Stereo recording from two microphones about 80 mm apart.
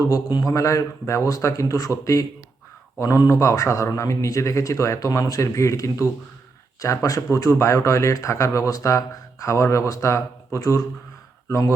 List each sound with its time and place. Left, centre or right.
0.3 s speech: left